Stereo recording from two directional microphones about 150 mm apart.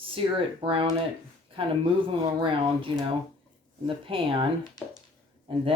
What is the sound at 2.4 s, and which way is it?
Speech, 35° right (ahead or behind).